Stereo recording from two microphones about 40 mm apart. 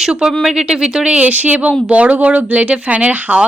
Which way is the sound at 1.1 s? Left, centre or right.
Right.